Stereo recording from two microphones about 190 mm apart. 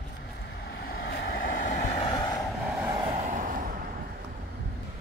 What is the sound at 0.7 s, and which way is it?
Vehicle, 55° left (ahead or behind).